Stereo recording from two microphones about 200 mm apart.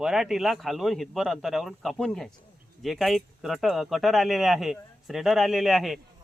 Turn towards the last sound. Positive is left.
turn(degrees=0)  # may be behind; listen again after turning